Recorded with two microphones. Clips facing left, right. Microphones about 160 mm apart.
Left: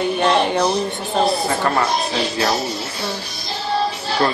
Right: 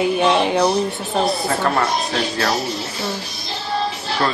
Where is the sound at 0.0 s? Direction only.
5° right (ahead or behind).